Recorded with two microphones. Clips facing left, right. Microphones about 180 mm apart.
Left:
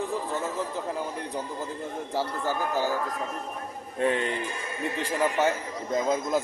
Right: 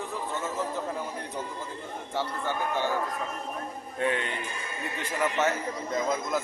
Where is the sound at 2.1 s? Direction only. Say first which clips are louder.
Left 2 dB; 35° left (ahead or behind).